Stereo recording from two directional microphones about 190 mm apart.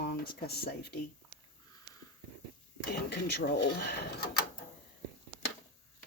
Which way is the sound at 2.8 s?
60° left (ahead or behind).